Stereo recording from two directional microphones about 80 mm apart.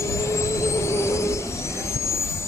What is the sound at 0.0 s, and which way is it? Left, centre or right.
Vehicle, left.